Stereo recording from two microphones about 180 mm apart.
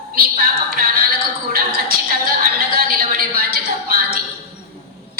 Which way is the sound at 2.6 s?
55° right (ahead or behind).